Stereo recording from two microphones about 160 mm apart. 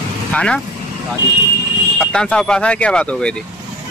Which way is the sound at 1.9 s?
5° left (ahead or behind).